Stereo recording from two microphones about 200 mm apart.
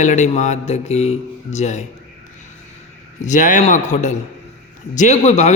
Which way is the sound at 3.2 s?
40° left (ahead or behind).